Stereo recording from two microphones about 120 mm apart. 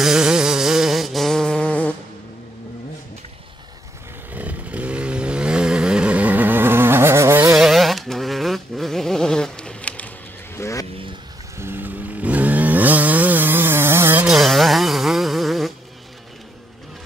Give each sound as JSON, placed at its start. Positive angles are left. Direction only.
{"t": 0.0, "sound": "a sound", "side_deg": -5}
{"t": 4.3, "sound": "chainsaw", "side_deg": -10}
{"t": 7.5, "sound": "vehicle", "side_deg": 0}
{"t": 10.6, "sound": "vehicle", "side_deg": 25}
{"t": 11.5, "sound": "chainsaw", "side_deg": -20}
{"t": 14.2, "sound": "a sound", "side_deg": -5}